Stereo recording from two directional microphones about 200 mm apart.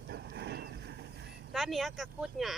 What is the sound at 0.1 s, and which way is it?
Dog, 55° right (ahead or behind).